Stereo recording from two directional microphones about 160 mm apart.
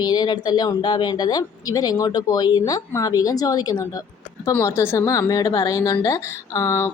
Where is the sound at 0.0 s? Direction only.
25° left (ahead or behind).